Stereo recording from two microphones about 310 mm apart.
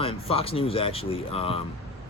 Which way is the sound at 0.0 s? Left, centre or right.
Centre.